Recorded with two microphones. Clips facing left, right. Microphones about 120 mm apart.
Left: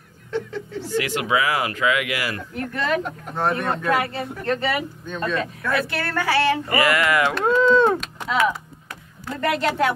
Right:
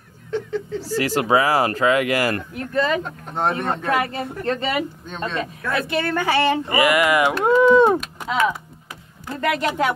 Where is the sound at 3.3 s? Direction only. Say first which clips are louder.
Right 1 dB; 20° right (ahead or behind).